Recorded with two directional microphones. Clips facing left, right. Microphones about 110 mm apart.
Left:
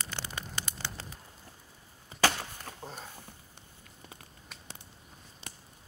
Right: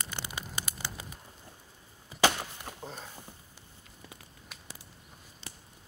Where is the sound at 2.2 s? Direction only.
15° right (ahead or behind).